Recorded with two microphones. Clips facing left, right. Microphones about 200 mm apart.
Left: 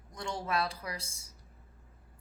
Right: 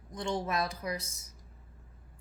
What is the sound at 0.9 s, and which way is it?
Speech, 30° left (ahead or behind).